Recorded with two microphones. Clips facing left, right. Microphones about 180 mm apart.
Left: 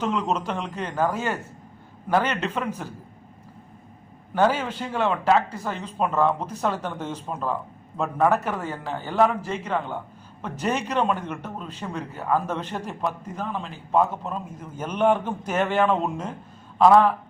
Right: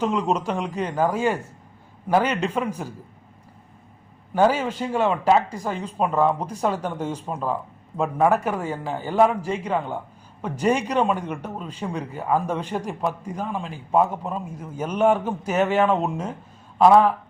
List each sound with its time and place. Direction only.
0.0 s a man's voice: 10° right (ahead or behind)
4.4 s a man's voice: 10° right (ahead or behind)